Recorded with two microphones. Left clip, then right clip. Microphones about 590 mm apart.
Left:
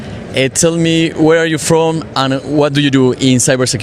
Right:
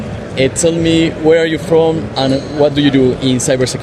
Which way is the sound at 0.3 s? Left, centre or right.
Left.